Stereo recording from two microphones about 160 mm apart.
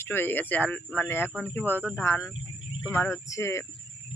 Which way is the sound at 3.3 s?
20° left (ahead or behind).